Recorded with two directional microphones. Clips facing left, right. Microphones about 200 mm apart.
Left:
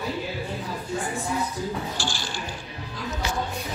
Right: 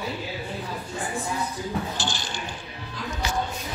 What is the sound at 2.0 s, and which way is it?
Speech, 20° right (ahead or behind).